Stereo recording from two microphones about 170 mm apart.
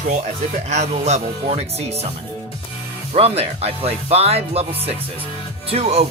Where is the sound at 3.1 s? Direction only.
35° right (ahead or behind).